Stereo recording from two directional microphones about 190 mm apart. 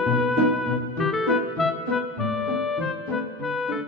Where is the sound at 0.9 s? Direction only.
Centre (ahead or behind).